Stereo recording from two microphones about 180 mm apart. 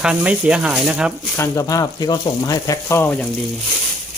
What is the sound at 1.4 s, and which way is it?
Speech, 20° left (ahead or behind).